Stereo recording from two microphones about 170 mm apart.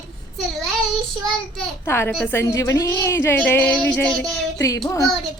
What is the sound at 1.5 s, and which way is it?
Speech, 15° left (ahead or behind).